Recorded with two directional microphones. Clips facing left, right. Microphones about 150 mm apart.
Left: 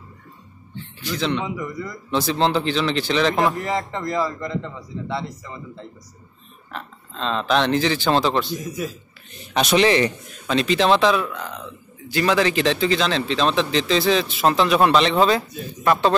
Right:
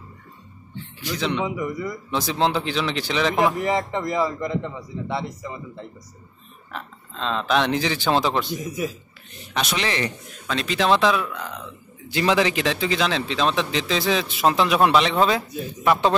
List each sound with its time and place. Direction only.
1.0 s speech: 10° right (ahead or behind)
6.7 s speech: 5° right (ahead or behind)
9.5 s a man's voice: 20° left (ahead or behind)
10.5 s speech: centre (ahead or behind)
12.1 s speech: 20° right (ahead or behind)